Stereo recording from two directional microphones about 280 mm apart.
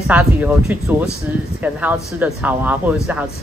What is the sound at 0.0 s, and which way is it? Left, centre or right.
A man's voice, centre.